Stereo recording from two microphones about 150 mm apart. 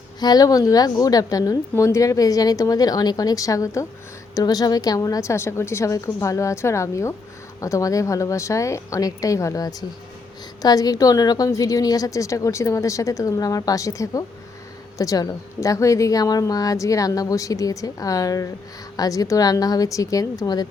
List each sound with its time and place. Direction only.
0.2 s a woman's voice: 25° left (ahead or behind)